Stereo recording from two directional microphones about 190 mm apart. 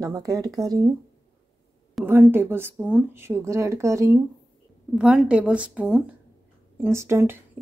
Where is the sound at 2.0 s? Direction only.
10° right (ahead or behind).